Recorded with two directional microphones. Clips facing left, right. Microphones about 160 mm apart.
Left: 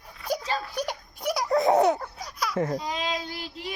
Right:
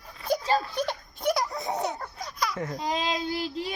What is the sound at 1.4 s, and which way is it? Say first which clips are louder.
Babbling: left 10 dB; 90° left.